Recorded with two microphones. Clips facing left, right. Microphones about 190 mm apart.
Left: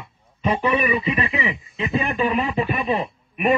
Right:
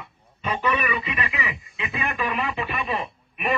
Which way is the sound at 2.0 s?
30° left (ahead or behind).